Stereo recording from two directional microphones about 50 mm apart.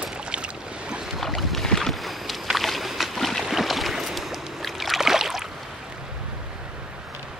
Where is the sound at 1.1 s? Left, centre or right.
Centre.